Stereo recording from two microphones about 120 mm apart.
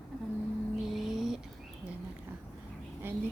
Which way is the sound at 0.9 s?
Centre (ahead or behind).